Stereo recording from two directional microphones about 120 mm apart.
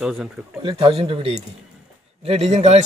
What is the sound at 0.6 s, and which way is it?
A man's voice, 50° right (ahead or behind).